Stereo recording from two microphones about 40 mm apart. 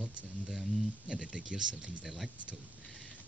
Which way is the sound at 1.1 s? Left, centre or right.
Right.